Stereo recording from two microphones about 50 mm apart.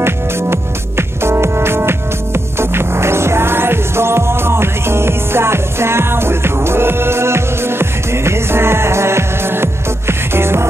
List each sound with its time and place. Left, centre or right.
0.0 s music: right